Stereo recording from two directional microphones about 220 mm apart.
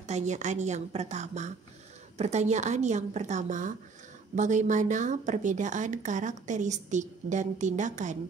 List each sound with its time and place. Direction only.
0.0 s a woman's voice: 30° right (ahead or behind)